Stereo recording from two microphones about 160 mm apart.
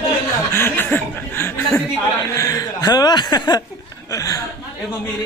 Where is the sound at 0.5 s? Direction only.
15° left (ahead or behind).